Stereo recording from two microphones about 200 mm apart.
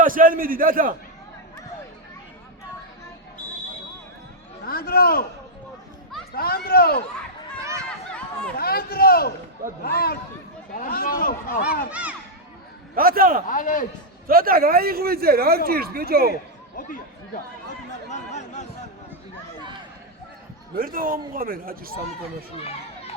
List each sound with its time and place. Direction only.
0.0 s speech: 45° right (ahead or behind)
4.6 s speech: 45° left (ahead or behind)
6.3 s speech: 50° left (ahead or behind)
8.5 s speech: 50° left (ahead or behind)
11.9 s speech: 5° right (ahead or behind)
13.0 s speech: 45° right (ahead or behind)
13.5 s a man's voice: 40° left (ahead or behind)
14.3 s speech: 45° right (ahead or behind)
17.7 s a sound: 35° left (ahead or behind)
20.7 s speech: 45° right (ahead or behind)